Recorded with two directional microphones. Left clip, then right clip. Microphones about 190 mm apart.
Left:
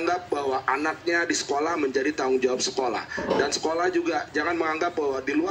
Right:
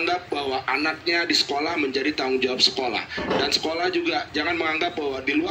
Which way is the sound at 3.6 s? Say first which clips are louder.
Even; 10° right (ahead or behind).